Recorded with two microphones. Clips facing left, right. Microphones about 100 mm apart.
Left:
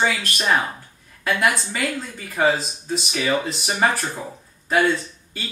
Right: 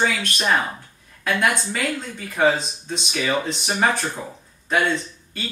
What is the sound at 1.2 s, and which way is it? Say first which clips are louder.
Speech: even; centre (ahead or behind).